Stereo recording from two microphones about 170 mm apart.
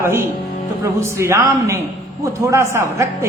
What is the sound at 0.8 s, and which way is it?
A woman's voice, 15° right (ahead or behind).